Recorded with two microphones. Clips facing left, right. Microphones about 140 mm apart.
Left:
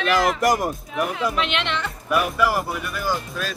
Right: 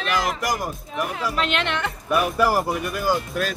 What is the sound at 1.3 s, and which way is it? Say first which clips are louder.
Speech: even; 40° right (ahead or behind).